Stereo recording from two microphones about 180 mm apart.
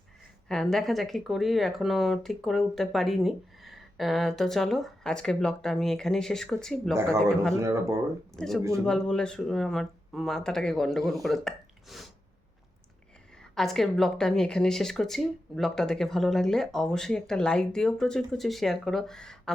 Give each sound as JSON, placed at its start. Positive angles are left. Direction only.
{"t": 0.4, "sound": "speech", "side_deg": 5}
{"t": 7.5, "sound": "speech", "side_deg": -15}
{"t": 8.4, "sound": "speech", "side_deg": 0}
{"t": 13.4, "sound": "speech", "side_deg": 0}